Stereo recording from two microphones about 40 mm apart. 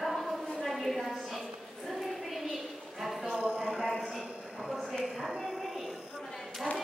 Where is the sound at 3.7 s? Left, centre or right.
Centre.